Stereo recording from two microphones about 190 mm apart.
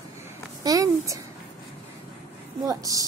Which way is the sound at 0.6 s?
20° right (ahead or behind).